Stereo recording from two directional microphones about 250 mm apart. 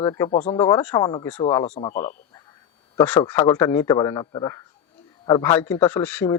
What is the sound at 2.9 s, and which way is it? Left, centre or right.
A man's voice, centre.